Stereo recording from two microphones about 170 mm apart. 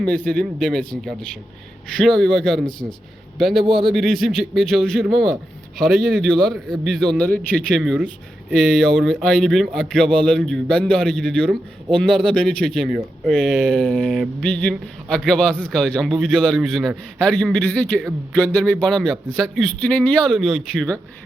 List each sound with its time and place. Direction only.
0.0 s a man's voice: 5° left (ahead or behind)
3.6 s speech: 30° right (ahead or behind)
3.9 s a man's voice: centre (ahead or behind)